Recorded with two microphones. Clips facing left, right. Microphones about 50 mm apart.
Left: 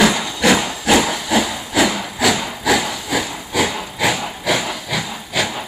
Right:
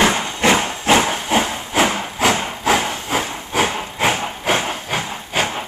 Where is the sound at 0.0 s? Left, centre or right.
Right.